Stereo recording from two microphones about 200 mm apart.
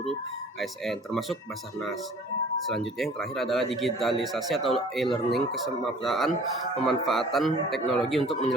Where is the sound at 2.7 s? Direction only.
Centre (ahead or behind).